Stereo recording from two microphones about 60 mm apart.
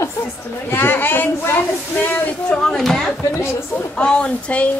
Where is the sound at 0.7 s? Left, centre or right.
Left.